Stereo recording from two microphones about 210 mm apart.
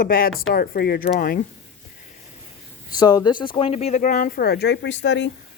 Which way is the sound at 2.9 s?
20° left (ahead or behind).